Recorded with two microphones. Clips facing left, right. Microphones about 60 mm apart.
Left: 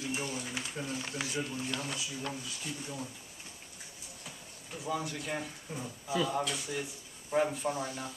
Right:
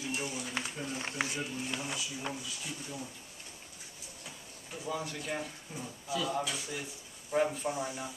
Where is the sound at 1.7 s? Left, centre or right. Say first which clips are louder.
Left 1 dB; centre.